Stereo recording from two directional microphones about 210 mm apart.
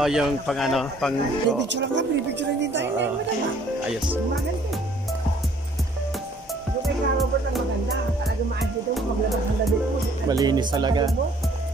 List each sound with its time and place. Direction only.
0.0 s speech: centre (ahead or behind)
1.7 s speech: 60° right (ahead or behind)
6.8 s music: centre (ahead or behind)
10.2 s speech: 20° right (ahead or behind)